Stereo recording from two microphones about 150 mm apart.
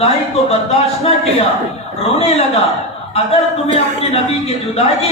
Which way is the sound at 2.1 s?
40° left (ahead or behind).